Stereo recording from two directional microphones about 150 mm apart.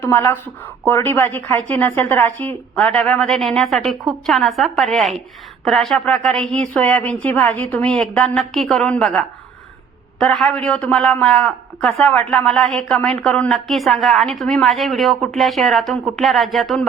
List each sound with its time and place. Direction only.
0.0 s a woman's voice: 20° left (ahead or behind); by 16.8 s centre (ahead or behind)